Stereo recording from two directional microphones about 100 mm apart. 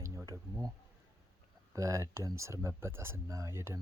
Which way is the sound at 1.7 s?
30° right (ahead or behind).